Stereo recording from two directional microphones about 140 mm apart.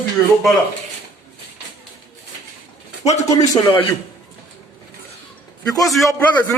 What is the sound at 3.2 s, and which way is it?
Speech, 25° left (ahead or behind).